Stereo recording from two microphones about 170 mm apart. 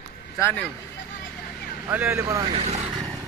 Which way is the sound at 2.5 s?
40° right (ahead or behind).